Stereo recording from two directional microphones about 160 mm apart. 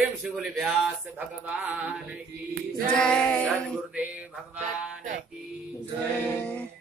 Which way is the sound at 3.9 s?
10° right (ahead or behind).